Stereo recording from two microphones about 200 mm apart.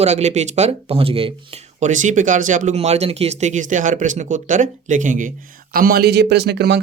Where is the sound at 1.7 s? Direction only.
40° right (ahead or behind); by 6.8 s 55° right (ahead or behind).